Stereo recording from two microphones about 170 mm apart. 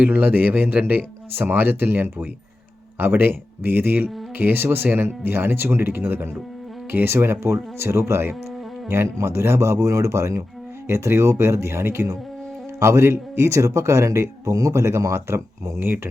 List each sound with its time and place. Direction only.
0.0 s speech: 10° right (ahead or behind)